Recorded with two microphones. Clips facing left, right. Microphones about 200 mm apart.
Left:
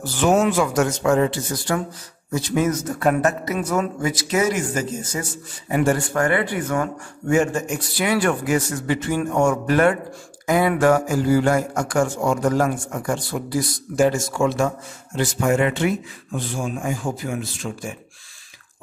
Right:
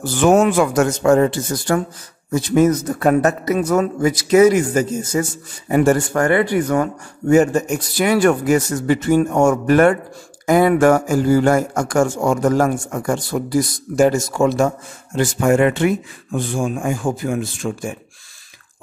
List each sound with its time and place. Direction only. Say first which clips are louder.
0.0 s a man's voice: right 4 dB; 50° right (ahead or behind)